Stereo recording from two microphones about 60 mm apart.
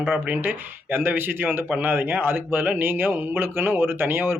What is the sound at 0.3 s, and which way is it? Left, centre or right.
Speech, right.